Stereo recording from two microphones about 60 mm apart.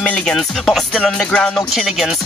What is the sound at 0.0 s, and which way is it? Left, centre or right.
Music, centre.